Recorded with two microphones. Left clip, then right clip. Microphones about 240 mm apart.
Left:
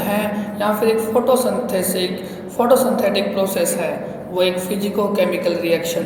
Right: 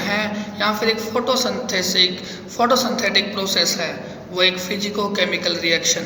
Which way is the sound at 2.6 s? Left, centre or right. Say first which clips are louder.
Left 3 dB; right.